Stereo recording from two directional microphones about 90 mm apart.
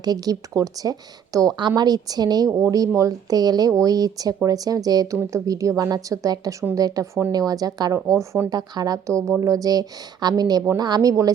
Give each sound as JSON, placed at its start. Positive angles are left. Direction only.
{"t": 0.0, "sound": "speech", "side_deg": -45}
{"t": 1.5, "sound": "a woman's voice", "side_deg": -50}
{"t": 8.4, "sound": "speech", "side_deg": -50}